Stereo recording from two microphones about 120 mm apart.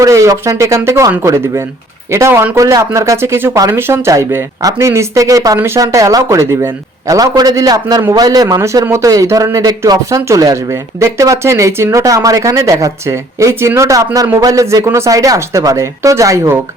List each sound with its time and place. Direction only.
0.0 s speech: 25° right (ahead or behind)